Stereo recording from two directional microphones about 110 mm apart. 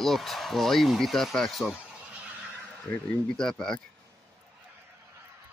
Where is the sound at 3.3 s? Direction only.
5° left (ahead or behind).